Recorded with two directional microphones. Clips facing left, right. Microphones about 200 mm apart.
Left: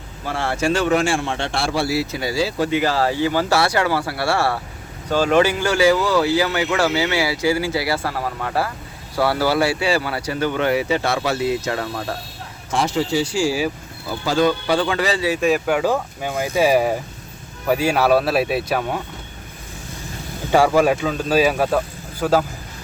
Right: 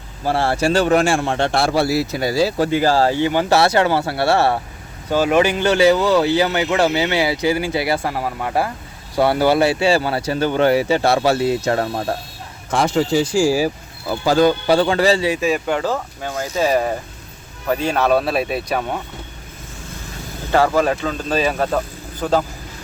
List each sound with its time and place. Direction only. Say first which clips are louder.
0.3 s a man's voice: right 3 dB; 35° right (ahead or behind)
5.0 s a man's voice: right 1 dB; 10° right (ahead or behind); by 12.1 s 35° right (ahead or behind)
12.7 s a man's voice: right 3 dB; 50° right (ahead or behind); by 15.4 s 30° right (ahead or behind)
15.4 s speech: left 1 dB; centre (ahead or behind)
20.5 s speech: left 1 dB; 10° left (ahead or behind)